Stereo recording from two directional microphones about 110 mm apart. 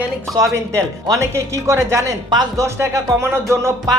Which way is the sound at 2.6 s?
25° right (ahead or behind).